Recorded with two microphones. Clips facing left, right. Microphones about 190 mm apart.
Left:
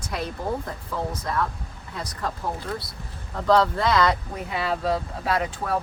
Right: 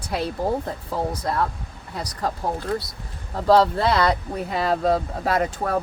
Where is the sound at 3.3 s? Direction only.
30° right (ahead or behind).